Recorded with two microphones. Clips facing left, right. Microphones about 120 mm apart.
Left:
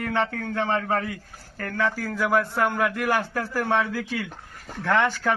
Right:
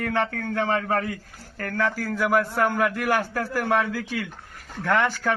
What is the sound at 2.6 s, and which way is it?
Speech, 15° left (ahead or behind).